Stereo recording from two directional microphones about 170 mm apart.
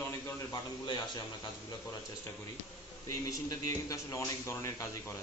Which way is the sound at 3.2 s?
20° left (ahead or behind).